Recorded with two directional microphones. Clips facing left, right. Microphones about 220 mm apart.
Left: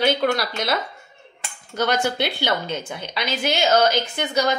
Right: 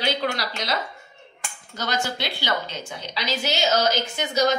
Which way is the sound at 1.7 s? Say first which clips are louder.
Left 6 dB; 55° left (ahead or behind).